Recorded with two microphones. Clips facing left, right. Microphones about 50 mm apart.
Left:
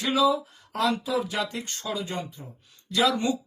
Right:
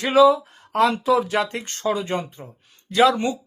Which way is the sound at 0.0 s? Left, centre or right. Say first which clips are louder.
Right 8 dB; right.